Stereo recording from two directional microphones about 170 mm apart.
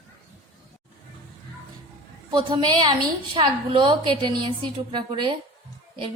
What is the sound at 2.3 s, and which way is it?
A woman's voice, 30° right (ahead or behind).